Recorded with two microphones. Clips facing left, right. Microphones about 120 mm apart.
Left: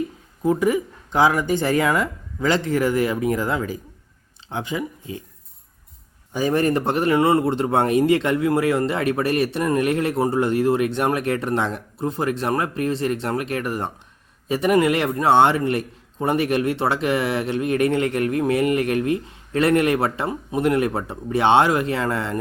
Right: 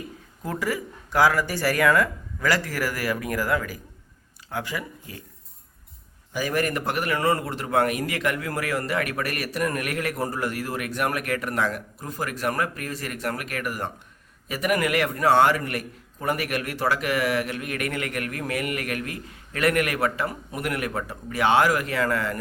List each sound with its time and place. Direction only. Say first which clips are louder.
0.4 s a man's voice: left 9 dB; 20° left (ahead or behind)
6.3 s a man's voice: left 6 dB; 30° left (ahead or behind)